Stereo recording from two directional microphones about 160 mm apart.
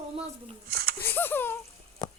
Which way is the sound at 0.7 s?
70° right (ahead or behind).